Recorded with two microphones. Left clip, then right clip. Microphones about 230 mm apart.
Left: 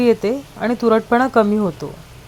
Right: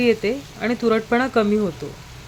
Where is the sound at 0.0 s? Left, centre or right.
Centre.